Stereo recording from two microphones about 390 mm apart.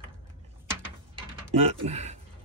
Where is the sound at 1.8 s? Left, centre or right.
Centre.